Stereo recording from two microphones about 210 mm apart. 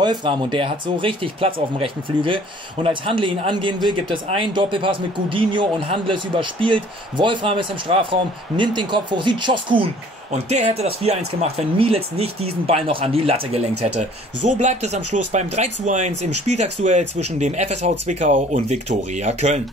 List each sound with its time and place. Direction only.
0.0 s speech: 20° right (ahead or behind)